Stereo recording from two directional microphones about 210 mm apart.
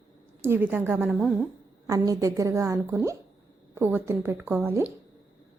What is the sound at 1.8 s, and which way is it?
A woman's voice, 15° right (ahead or behind).